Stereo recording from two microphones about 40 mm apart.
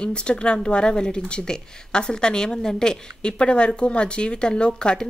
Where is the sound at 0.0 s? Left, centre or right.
Left.